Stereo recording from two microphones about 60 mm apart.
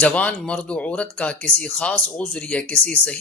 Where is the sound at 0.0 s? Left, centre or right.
Left.